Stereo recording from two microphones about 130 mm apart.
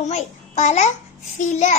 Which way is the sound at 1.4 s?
70° left (ahead or behind).